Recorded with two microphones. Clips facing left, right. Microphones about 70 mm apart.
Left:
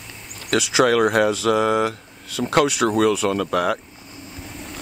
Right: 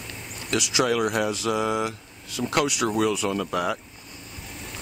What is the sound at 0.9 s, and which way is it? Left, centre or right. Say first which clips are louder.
Speech: left 6 dB; left.